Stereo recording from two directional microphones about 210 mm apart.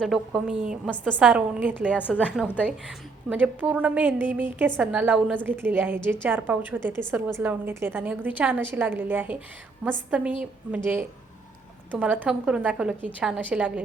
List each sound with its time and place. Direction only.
0.0 s a woman's voice: centre (ahead or behind)
1.3 s a woman's voice: 10° right (ahead or behind)
2.0 s a woman's voice: 10° left (ahead or behind)
2.2 s a woman's voice: 5° right (ahead or behind)
11.9 s a woman's voice: 5° right (ahead or behind)